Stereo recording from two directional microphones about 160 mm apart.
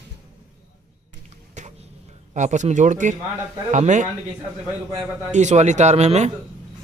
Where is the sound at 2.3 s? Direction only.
50° right (ahead or behind).